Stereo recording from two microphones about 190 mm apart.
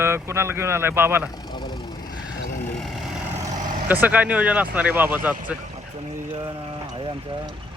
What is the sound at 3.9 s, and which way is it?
Speech, 10° right (ahead or behind).